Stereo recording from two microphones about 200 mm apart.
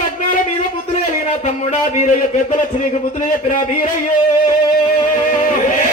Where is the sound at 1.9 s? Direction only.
40° left (ahead or behind).